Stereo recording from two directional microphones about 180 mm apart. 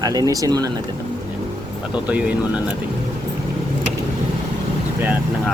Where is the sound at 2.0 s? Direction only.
5° right (ahead or behind).